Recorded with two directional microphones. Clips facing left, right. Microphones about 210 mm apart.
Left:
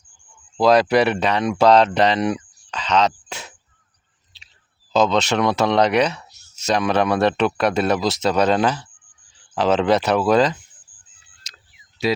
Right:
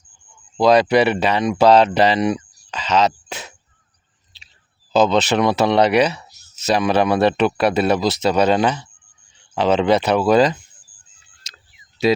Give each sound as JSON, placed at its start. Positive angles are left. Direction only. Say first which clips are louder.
{"t": 0.5, "sound": "speech", "louder": "right 1 dB", "side_deg": 0}
{"t": 4.3, "sound": "clicking", "louder": "right 1 dB", "side_deg": 0}
{"t": 4.9, "sound": "speech", "louder": "right 2 dB", "side_deg": -5}
{"t": 12.0, "sound": "speech", "louder": "right 4 dB", "side_deg": -20}